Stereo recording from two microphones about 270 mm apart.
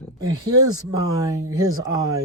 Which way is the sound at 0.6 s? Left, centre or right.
Centre.